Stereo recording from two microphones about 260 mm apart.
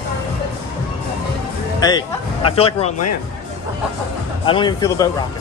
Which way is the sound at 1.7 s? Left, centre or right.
Centre.